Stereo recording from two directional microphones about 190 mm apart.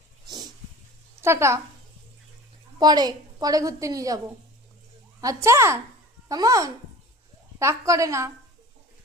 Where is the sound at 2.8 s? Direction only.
20° right (ahead or behind).